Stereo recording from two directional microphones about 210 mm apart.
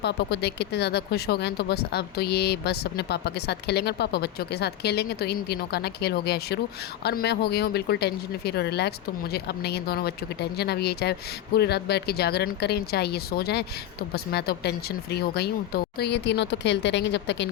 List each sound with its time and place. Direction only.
0.0 s speech: 50° left (ahead or behind)